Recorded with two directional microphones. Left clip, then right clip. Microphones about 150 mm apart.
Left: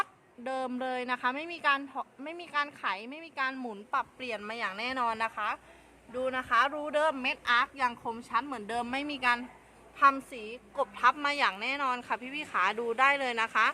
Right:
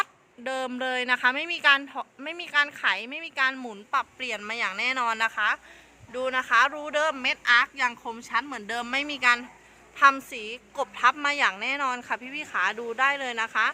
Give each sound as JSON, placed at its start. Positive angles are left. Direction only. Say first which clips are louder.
{"t": 0.0, "sound": "speech", "louder": "right 5 dB", "side_deg": -5}